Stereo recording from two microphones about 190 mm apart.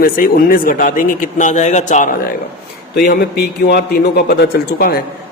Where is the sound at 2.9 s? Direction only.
55° left (ahead or behind).